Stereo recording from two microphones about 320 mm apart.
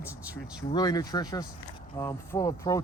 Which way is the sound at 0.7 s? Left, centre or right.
Centre.